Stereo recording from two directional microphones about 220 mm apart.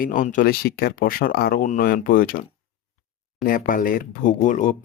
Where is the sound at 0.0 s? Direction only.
35° left (ahead or behind).